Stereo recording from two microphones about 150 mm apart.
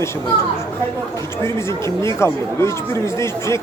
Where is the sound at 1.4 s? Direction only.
20° left (ahead or behind).